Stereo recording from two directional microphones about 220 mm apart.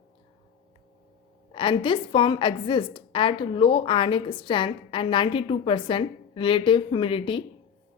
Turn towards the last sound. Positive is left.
turn(degrees=25)  # may be behind; listen again after turning